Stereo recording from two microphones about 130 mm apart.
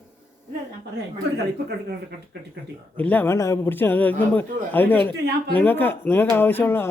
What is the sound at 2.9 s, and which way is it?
Speech, 15° left (ahead or behind).